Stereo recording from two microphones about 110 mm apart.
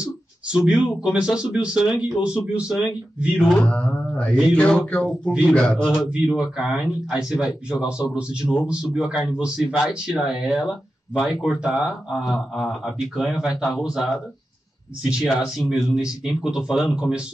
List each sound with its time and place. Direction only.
0.5 s speech: 10° right (ahead or behind)
3.5 s a sound: 10° left (ahead or behind)
6.0 s a man's voice: 5° right (ahead or behind)